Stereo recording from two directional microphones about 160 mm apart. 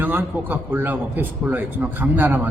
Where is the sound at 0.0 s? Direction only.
10° right (ahead or behind).